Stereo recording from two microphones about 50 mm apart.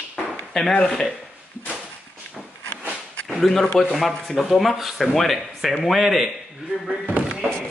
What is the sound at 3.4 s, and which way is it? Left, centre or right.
Speech, centre.